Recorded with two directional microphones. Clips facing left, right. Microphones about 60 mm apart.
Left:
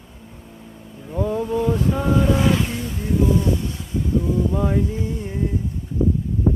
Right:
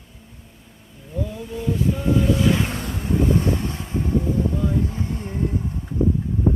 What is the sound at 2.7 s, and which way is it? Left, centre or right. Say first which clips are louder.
Vehicle: left 1 dB; right.